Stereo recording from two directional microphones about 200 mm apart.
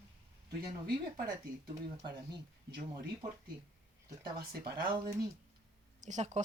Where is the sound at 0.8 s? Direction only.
50° right (ahead or behind).